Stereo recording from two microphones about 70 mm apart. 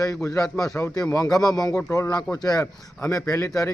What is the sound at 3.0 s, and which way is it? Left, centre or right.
Speech, left.